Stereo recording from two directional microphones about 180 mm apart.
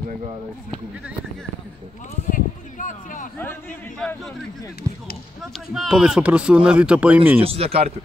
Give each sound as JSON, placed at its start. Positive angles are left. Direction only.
{"t": 2.2, "sound": "a sound", "side_deg": 45}
{"t": 4.0, "sound": "speech", "side_deg": 5}
{"t": 4.9, "sound": "speech", "side_deg": -20}
{"t": 5.7, "sound": "speech", "side_deg": -5}
{"t": 7.4, "sound": "speech", "side_deg": -35}